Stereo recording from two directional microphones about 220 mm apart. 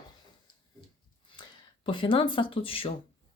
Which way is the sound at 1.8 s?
25° left (ahead or behind).